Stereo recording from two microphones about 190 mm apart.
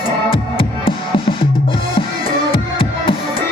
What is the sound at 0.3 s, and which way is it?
Music, 25° left (ahead or behind).